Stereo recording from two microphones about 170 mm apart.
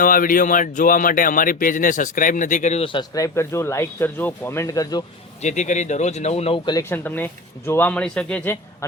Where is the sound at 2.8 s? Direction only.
30° left (ahead or behind).